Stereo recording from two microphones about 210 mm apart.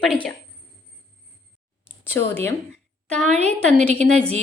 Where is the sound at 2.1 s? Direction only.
10° left (ahead or behind).